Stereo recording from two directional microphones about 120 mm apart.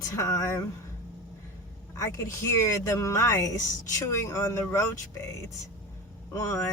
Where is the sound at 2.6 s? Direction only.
25° left (ahead or behind).